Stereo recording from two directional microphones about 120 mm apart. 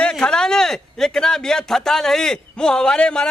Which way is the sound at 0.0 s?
5° left (ahead or behind).